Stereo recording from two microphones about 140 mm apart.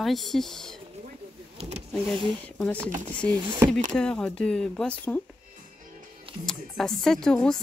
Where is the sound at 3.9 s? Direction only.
5° left (ahead or behind).